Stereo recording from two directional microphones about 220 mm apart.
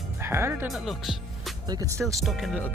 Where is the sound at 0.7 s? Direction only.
Centre (ahead or behind).